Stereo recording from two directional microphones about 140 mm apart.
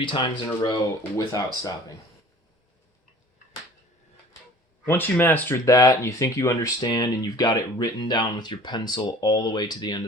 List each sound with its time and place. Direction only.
0.0 s speech: 35° left (ahead or behind)
0.4 s speech: 25° left (ahead or behind)
4.9 s speech: 15° left (ahead or behind); by 10.0 s 30° left (ahead or behind)